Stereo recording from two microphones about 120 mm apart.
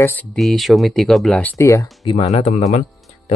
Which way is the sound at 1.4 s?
15° left (ahead or behind).